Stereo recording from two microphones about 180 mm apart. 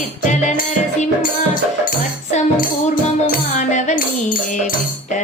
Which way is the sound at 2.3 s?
50° left (ahead or behind).